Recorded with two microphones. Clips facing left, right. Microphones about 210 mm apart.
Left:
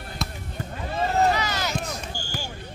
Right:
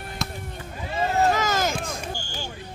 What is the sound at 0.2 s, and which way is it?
Basketball bounce, centre (ahead or behind).